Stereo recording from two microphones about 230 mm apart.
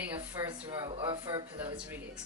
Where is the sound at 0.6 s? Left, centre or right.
Right.